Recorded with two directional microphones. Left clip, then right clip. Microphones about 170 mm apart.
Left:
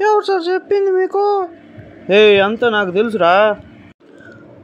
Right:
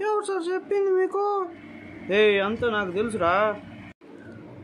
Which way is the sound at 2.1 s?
35° left (ahead or behind).